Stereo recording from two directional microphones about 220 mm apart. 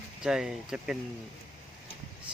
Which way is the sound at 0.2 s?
Centre (ahead or behind).